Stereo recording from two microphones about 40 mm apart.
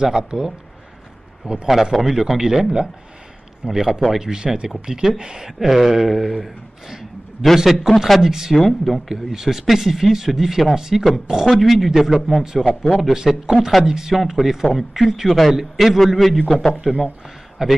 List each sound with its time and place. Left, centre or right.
0.0 s a man's voice: centre
1.7 s a man's voice: centre
8.5 s a man's voice: centre
9.1 s speech: centre
11.5 s a man's voice: centre
13.1 s speech: centre
16.2 s a man's voice: centre
16.4 s a man's voice: centre
17.6 s speech: centre